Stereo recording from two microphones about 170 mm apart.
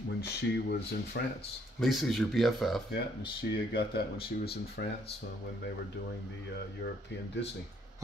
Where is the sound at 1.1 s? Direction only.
75° left (ahead or behind).